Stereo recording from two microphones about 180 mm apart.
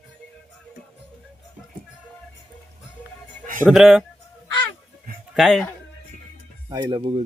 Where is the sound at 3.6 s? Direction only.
5° right (ahead or behind).